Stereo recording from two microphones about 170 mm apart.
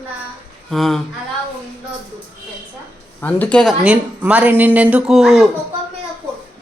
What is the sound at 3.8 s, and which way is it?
Speech, 10° right (ahead or behind).